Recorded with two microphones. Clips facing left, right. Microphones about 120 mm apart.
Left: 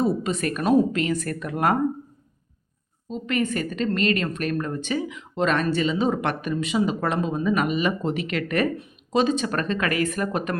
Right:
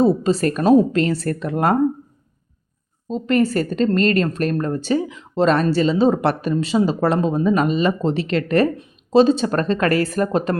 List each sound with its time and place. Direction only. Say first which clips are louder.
0.0 s a woman's voice: right 7 dB; 30° right (ahead or behind)
3.1 s a woman's voice: right 7 dB; 35° right (ahead or behind)